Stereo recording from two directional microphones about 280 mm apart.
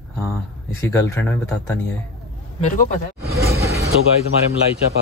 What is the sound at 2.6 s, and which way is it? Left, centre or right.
Speech, left.